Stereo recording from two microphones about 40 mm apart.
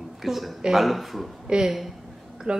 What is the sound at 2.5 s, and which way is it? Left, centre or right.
Speech, right.